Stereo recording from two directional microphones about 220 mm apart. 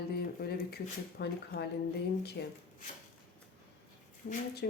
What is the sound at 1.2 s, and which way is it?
Speech, 50° left (ahead or behind).